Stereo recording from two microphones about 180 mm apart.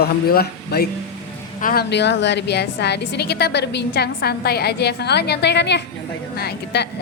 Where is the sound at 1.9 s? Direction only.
70° left (ahead or behind).